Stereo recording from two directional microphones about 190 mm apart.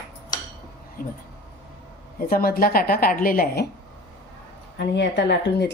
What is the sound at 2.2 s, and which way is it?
A woman's voice, 50° left (ahead or behind).